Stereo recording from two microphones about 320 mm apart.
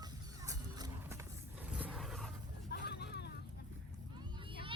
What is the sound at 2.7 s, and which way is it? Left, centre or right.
Vehicle, left.